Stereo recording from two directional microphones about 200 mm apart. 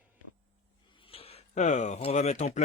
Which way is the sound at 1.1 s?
30° left (ahead or behind).